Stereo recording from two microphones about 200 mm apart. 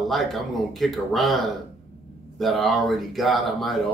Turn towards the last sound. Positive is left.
turn(degrees=0)  # may be behind; listen again after turning